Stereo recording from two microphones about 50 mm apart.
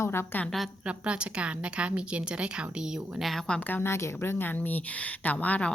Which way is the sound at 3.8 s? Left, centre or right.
Left.